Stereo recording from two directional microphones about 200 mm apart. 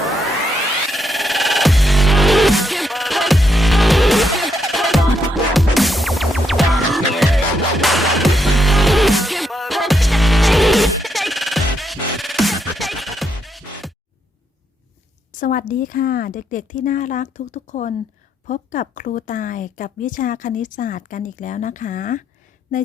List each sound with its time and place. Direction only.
0.9 s music: centre (ahead or behind)
15.3 s a woman's voice: 40° left (ahead or behind)